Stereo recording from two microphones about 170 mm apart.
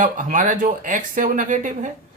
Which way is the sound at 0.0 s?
50° right (ahead or behind).